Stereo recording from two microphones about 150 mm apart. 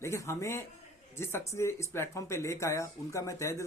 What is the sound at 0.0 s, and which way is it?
Speech, 20° left (ahead or behind).